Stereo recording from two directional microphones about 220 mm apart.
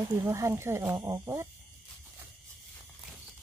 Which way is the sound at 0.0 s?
15° right (ahead or behind).